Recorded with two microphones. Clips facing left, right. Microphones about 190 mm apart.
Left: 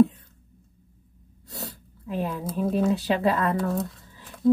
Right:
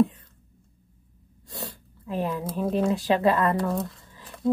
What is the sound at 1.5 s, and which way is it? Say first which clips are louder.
Speech: right 1 dB; 5° left (ahead or behind).